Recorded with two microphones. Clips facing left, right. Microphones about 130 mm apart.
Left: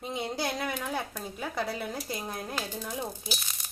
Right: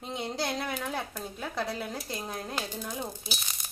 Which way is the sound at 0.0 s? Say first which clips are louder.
Left 1 dB; 5° left (ahead or behind).